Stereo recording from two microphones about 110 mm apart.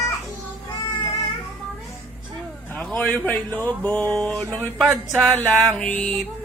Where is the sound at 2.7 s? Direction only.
15° left (ahead or behind).